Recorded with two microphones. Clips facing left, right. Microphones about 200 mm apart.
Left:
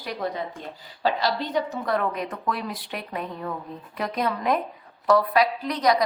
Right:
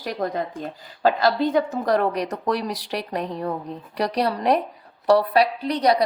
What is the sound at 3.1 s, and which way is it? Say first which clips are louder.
A woman's voice: right 4 dB; 40° right (ahead or behind).